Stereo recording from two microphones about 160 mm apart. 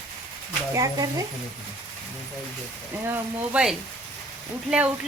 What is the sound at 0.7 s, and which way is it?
Speech, 20° right (ahead or behind).